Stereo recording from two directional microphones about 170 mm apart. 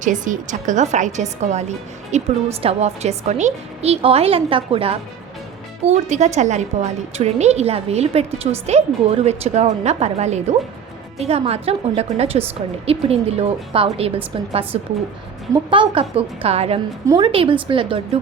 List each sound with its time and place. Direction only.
0.0 s a woman's voice: 50° right (ahead or behind); by 18.0 s 30° right (ahead or behind)